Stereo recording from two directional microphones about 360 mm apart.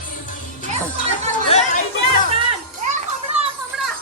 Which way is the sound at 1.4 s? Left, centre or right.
Centre.